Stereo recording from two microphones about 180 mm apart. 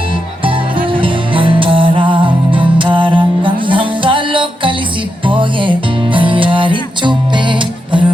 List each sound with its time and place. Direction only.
0.4 s music: 30° right (ahead or behind)